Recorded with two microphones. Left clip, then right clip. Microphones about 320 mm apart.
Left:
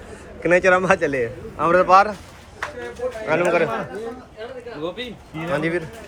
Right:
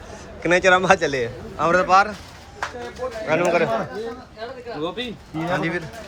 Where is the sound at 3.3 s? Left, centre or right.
Centre.